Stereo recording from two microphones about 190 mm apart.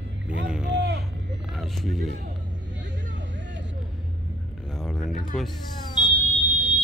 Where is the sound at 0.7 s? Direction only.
65° right (ahead or behind).